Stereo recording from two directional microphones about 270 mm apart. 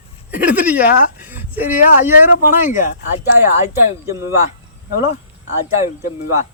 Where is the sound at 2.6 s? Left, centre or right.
Left.